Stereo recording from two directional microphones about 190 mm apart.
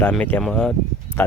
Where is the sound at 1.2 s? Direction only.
10° left (ahead or behind).